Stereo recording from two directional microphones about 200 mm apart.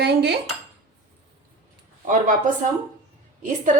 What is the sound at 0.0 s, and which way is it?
Dishes, 55° right (ahead or behind).